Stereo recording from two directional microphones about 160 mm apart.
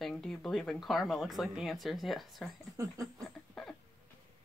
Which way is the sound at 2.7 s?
20° right (ahead or behind).